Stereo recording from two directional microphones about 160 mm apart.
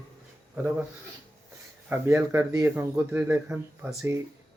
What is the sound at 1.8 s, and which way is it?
A man's voice, 15° right (ahead or behind).